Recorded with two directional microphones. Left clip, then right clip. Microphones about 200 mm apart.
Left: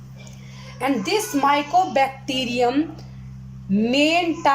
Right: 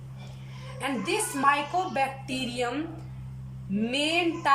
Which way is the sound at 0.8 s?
35° left (ahead or behind).